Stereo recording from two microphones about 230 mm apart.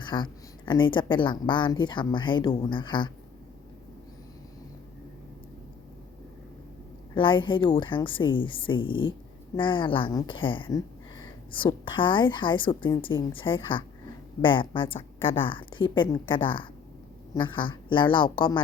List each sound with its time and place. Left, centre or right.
0.0 s speech: centre
7.1 s speech: left